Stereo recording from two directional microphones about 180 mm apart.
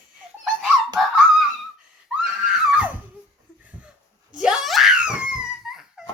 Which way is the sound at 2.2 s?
5° right (ahead or behind).